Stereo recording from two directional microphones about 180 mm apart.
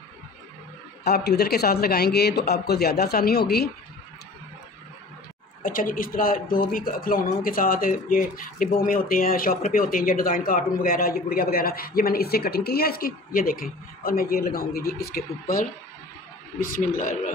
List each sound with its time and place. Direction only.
1.0 s a man's voice: 65° left (ahead or behind)
5.6 s a man's voice: 50° left (ahead or behind)
16.5 s speech: 50° left (ahead or behind)